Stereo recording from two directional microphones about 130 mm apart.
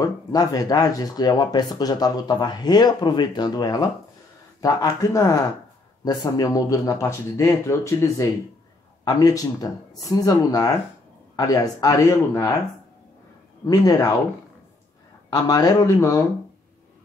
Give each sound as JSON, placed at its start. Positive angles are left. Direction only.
{"t": 0.0, "sound": "speech", "side_deg": 30}
{"t": 13.7, "sound": "speech", "side_deg": 30}
{"t": 15.2, "sound": "speech", "side_deg": 30}